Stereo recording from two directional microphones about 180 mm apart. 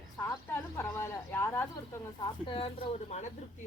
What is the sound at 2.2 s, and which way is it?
Speech, 30° left (ahead or behind).